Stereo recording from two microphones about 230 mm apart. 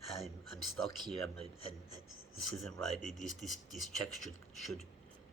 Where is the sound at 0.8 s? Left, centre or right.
Centre.